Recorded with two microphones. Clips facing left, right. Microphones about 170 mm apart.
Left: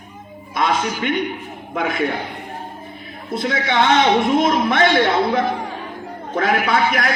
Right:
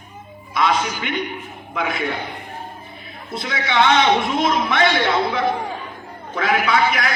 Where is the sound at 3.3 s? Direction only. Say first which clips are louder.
Left 4 dB; 50° left (ahead or behind).